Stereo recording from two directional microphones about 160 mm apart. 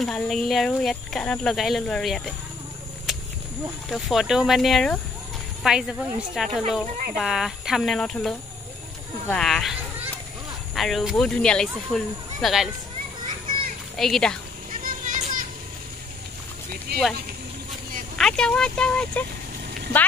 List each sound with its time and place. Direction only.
0.0 s speech: centre (ahead or behind)
3.1 s a sound: centre (ahead or behind)
3.9 s speech: centre (ahead or behind)
9.3 s children playing: centre (ahead or behind)
10.7 s speech: centre (ahead or behind)
13.9 s speech: centre (ahead or behind)
14.7 s a sound: 55° right (ahead or behind)
16.9 s speech: 90° right
18.1 s speech: 5° left (ahead or behind)